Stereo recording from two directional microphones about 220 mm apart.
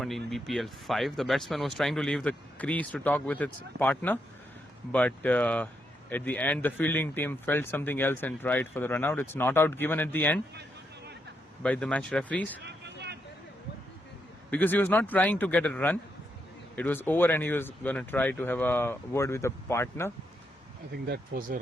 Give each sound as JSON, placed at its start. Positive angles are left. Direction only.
{"t": 0.0, "sound": "speech", "side_deg": 0}
{"t": 10.5, "sound": "a sound", "side_deg": -50}
{"t": 11.6, "sound": "speech", "side_deg": 5}
{"t": 12.6, "sound": "a sound", "side_deg": -50}
{"t": 14.5, "sound": "speech", "side_deg": 10}
{"t": 20.9, "sound": "speech", "side_deg": -45}